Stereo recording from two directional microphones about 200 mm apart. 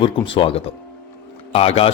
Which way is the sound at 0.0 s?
25° left (ahead or behind).